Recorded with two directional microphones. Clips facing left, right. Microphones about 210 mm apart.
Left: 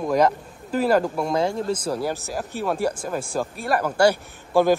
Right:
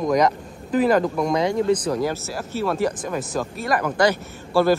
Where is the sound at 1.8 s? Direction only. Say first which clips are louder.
Right 2 dB; 10° left (ahead or behind).